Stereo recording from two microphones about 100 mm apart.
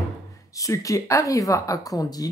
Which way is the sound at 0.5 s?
35° left (ahead or behind).